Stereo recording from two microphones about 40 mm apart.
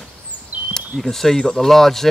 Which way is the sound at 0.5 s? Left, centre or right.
Right.